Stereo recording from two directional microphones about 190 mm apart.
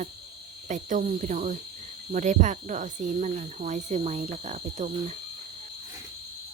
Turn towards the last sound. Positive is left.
turn(degrees=-35)  # may be behind; listen again after turning